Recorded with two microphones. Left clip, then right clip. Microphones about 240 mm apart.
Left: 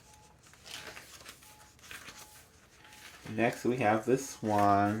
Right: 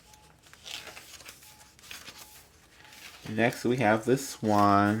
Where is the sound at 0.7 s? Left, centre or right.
Centre.